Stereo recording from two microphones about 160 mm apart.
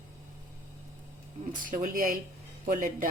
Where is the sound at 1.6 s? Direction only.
60° right (ahead or behind).